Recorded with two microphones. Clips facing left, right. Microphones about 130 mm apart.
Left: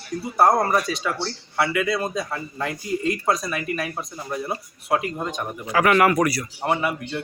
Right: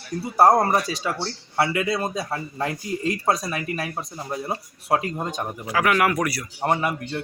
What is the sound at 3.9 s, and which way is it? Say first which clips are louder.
Speech: even; 20° right (ahead or behind).